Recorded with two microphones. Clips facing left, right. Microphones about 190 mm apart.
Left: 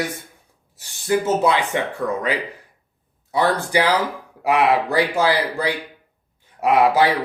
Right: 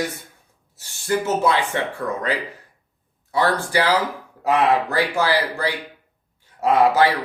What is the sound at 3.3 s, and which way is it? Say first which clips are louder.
Speech: left 1 dB; 15° left (ahead or behind).